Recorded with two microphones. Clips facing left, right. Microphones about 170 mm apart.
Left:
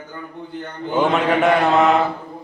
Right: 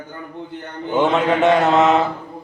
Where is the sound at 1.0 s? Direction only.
20° right (ahead or behind).